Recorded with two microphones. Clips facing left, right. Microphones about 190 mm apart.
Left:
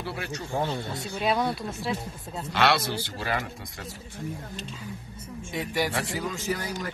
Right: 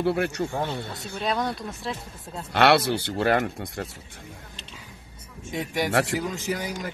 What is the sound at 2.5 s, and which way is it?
Speech, 55° right (ahead or behind).